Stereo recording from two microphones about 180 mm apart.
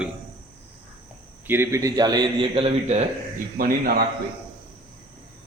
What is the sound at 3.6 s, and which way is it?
Speech, 55° right (ahead or behind).